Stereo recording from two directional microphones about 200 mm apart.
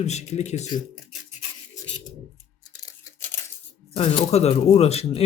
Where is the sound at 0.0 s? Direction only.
35° left (ahead or behind).